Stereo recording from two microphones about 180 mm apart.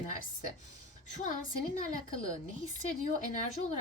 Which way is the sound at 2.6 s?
45° left (ahead or behind).